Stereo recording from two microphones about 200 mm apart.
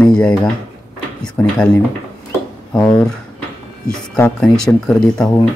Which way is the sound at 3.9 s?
5° left (ahead or behind).